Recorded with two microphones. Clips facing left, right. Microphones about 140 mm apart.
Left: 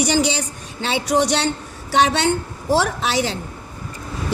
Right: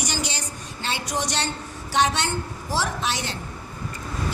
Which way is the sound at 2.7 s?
65° left (ahead or behind).